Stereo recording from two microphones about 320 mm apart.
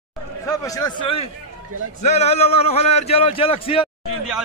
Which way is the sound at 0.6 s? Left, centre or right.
Centre.